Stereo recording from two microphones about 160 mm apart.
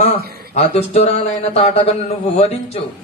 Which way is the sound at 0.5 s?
40° left (ahead or behind).